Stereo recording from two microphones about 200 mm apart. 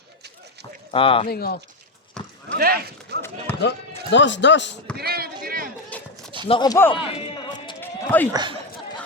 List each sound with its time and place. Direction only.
0.9 s speech: 25° left (ahead or behind)
1.3 s speech: 50° left (ahead or behind)
2.2 s clip-clop: 5° left (ahead or behind)
2.6 s speech: 50° right (ahead or behind)
3.2 s speech: 10° left (ahead or behind)
3.6 s speech: 65° left (ahead or behind)
4.9 s a sound: 50° right (ahead or behind)
5.9 s a sound: 5° left (ahead or behind)
6.5 s speech: 20° left (ahead or behind)
7.8 s run: 10° left (ahead or behind)
8.3 s speech: 20° right (ahead or behind)